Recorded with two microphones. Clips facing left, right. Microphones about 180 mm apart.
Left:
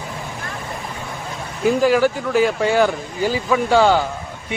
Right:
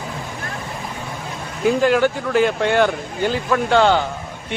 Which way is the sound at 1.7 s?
5° left (ahead or behind).